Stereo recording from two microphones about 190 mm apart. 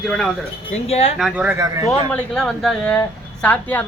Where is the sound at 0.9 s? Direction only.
35° left (ahead or behind).